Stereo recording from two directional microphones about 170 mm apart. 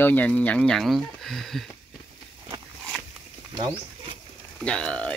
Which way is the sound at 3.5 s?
25° right (ahead or behind).